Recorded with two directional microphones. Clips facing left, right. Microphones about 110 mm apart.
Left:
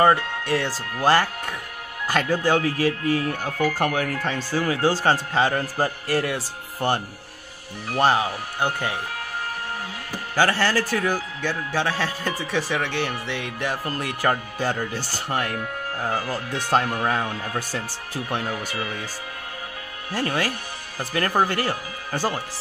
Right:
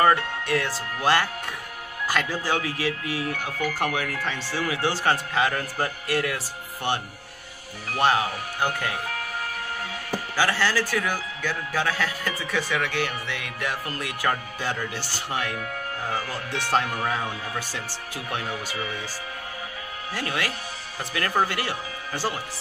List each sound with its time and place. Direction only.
0.0 s a man's voice: 30° left (ahead or behind)
2.1 s a man's voice: 50° left (ahead or behind)
8.5 s speech: 20° left (ahead or behind)
10.3 s a man's voice: 45° left (ahead or behind)
20.2 s a man's voice: 35° left (ahead or behind)